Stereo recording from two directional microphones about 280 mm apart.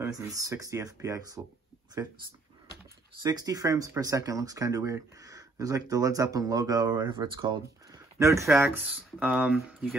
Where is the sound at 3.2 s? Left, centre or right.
Centre.